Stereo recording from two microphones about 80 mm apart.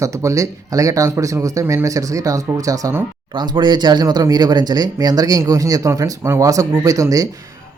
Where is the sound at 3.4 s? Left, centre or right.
Right.